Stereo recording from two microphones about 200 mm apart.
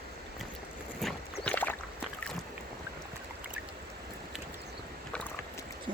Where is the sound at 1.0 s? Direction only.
5° left (ahead or behind).